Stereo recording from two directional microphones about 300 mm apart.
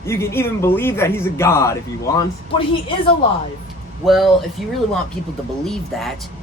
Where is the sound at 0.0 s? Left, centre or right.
Centre.